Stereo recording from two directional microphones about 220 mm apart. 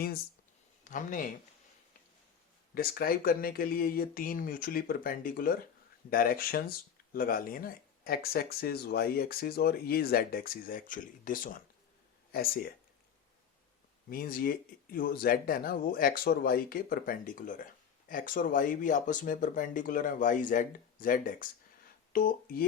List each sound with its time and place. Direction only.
0.9 s speech: 35° left (ahead or behind)
2.7 s speech: 40° left (ahead or behind)
14.1 s speech: 40° left (ahead or behind)